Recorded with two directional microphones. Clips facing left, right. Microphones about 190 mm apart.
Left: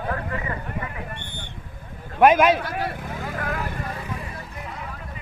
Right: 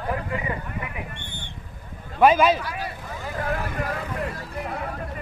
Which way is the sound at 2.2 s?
10° left (ahead or behind).